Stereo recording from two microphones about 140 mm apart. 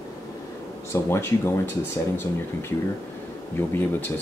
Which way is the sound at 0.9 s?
20° left (ahead or behind).